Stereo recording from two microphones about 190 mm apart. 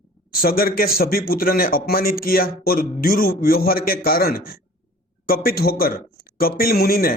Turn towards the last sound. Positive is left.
turn(degrees=50)  # may be behind; listen again after turning